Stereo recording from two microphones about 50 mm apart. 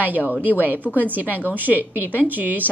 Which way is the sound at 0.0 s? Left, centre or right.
Right.